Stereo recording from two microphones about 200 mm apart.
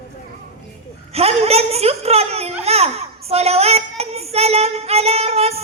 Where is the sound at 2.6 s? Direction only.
30° right (ahead or behind).